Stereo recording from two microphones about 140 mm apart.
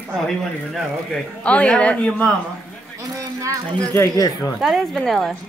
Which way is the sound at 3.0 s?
25° right (ahead or behind).